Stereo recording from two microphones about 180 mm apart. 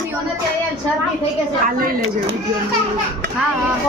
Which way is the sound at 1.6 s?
50° right (ahead or behind).